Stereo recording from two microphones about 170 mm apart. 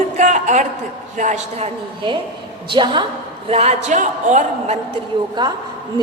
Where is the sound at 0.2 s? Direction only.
45° right (ahead or behind).